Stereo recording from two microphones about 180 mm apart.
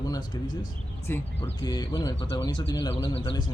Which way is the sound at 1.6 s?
25° left (ahead or behind).